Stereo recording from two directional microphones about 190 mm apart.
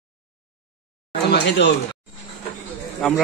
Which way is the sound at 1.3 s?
65° left (ahead or behind).